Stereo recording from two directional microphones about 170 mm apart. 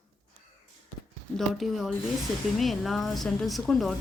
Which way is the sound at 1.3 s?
Centre (ahead or behind).